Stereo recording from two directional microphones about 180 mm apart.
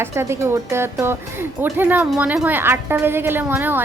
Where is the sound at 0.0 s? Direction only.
15° right (ahead or behind).